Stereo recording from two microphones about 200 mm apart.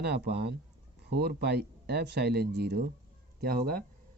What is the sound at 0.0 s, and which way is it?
Speech, 55° right (ahead or behind).